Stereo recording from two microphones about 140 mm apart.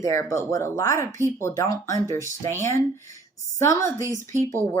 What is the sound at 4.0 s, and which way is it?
Speech, 20° right (ahead or behind).